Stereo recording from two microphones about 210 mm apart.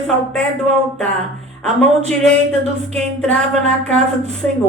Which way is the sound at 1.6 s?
5° left (ahead or behind).